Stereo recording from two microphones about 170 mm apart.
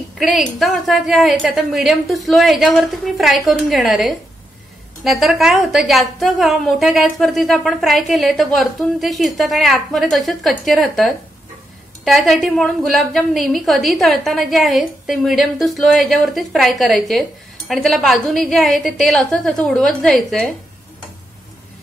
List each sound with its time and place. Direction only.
0.2 s a woman's voice: centre (ahead or behind)